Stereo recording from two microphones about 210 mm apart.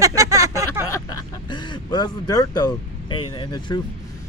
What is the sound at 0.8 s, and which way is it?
Speech, 15° left (ahead or behind).